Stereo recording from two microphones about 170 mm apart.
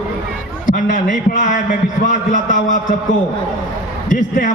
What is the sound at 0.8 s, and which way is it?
A man's voice, 50° left (ahead or behind).